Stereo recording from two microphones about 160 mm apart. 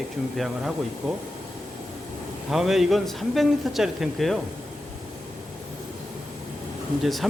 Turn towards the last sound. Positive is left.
turn(degrees=0)  # may be behind; listen again after turning